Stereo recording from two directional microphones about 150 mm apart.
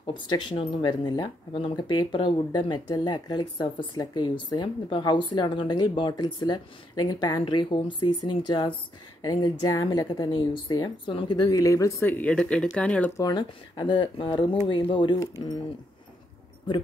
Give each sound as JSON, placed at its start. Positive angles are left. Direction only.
{"t": 0.0, "sound": "speech", "side_deg": 30}
{"t": 13.2, "sound": "speech", "side_deg": 30}